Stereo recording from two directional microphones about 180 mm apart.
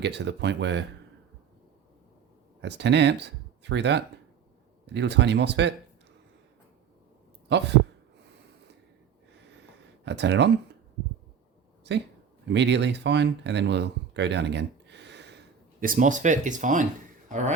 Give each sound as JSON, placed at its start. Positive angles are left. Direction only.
{"t": 0.0, "sound": "speech", "side_deg": -75}
{"t": 2.6, "sound": "speech", "side_deg": -75}
{"t": 7.5, "sound": "speech", "side_deg": -70}
{"t": 10.0, "sound": "speech", "side_deg": -75}
{"t": 11.8, "sound": "speech", "side_deg": -70}
{"t": 15.8, "sound": "speech", "side_deg": -50}